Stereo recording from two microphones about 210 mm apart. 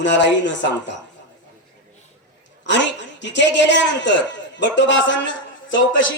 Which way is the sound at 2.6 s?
60° left (ahead or behind).